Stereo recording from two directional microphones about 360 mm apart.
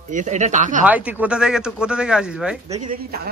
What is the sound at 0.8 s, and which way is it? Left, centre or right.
Speech, centre.